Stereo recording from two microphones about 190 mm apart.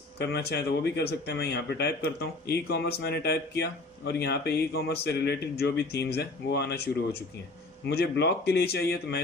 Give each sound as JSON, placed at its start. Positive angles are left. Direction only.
{"t": 0.2, "sound": "speech", "side_deg": 60}
{"t": 7.9, "sound": "speech", "side_deg": 60}